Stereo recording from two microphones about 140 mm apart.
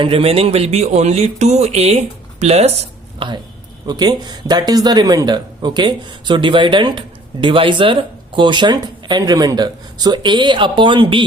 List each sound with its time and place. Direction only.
0.0 s speech: 45° right (ahead or behind)
3.2 s speech: 35° right (ahead or behind)